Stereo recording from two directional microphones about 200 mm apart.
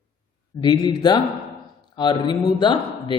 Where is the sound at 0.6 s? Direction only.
20° left (ahead or behind).